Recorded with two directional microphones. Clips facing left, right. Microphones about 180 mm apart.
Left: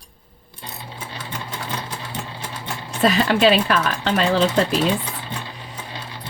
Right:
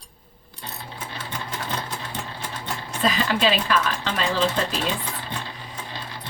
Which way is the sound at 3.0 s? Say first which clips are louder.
Left 6 dB; 55° left (ahead or behind).